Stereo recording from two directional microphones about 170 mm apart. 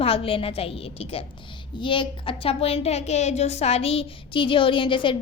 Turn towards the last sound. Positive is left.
turn(degrees=30)  # may be behind; listen again after turning